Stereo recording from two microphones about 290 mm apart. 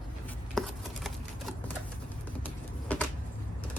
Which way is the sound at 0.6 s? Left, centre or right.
Centre.